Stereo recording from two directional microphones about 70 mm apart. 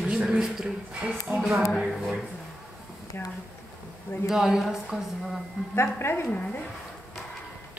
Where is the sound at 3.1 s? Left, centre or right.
Left.